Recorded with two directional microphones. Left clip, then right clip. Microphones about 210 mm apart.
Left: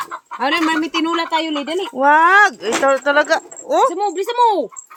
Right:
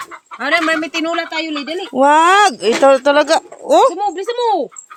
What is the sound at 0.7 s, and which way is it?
Speech, 30° right (ahead or behind).